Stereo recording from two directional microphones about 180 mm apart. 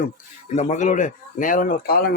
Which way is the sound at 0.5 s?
40° left (ahead or behind).